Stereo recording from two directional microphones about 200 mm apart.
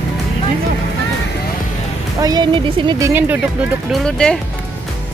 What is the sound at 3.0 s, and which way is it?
Speech, 10° right (ahead or behind).